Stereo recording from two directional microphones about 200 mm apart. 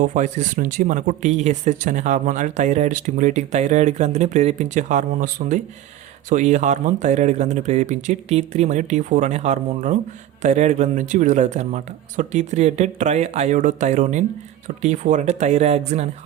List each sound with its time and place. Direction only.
0.0 s speech: 40° right (ahead or behind)